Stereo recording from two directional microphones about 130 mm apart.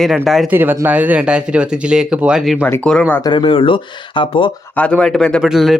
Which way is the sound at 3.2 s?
40° left (ahead or behind).